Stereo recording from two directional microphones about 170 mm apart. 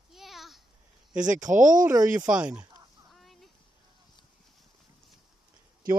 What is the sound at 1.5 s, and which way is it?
Speech, 50° right (ahead or behind).